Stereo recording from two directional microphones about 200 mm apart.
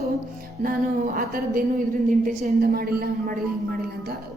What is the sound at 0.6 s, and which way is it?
A woman's voice, 45° right (ahead or behind).